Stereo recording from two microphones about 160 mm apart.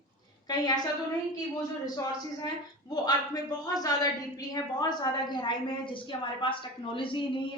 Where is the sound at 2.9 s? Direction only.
25° left (ahead or behind).